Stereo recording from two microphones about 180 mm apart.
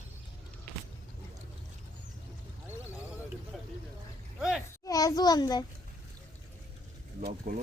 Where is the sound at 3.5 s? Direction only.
Centre (ahead or behind).